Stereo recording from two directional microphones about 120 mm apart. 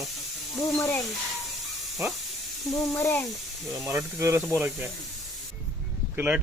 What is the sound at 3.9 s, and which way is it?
Speech, 25° right (ahead or behind).